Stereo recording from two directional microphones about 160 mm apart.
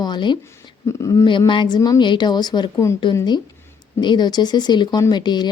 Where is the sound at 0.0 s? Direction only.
30° left (ahead or behind).